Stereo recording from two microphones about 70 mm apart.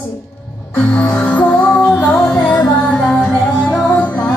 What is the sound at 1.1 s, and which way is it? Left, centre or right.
Music, left.